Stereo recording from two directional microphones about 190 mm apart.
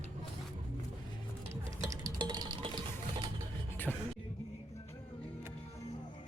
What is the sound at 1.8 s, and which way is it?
Music, 20° right (ahead or behind).